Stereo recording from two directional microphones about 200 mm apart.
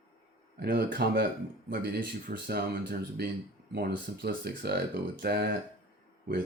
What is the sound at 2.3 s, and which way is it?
Speech, 50° right (ahead or behind).